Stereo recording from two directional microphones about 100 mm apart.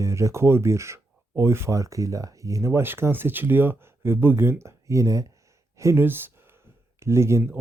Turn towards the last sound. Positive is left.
turn(degrees=-30)  # may be behind; listen again after turning